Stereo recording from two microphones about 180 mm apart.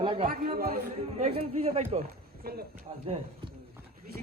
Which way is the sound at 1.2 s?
40° right (ahead or behind).